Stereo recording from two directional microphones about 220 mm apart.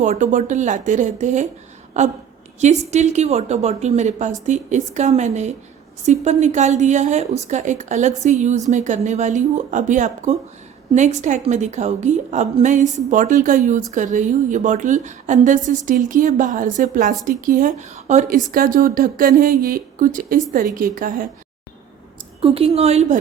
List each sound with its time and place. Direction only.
0.0 s a woman's voice: 35° right (ahead or behind)
22.4 s a woman's voice: 25° right (ahead or behind)